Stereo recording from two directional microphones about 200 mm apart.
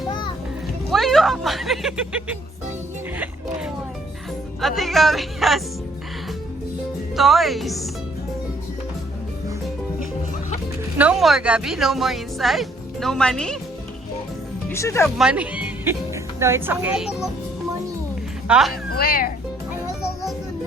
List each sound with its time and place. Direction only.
0.9 s speech: centre (ahead or behind)
4.6 s speech: centre (ahead or behind)
7.2 s speech: centre (ahead or behind)
10.9 s speech: 5° right (ahead or behind)
14.7 s speech: 15° left (ahead or behind)
15.0 s speech: 5° right (ahead or behind)
18.4 s speech: 5° right (ahead or behind)
18.9 s speech: 50° left (ahead or behind)